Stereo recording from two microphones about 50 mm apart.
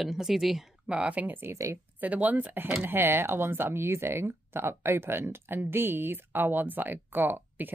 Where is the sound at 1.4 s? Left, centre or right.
Right.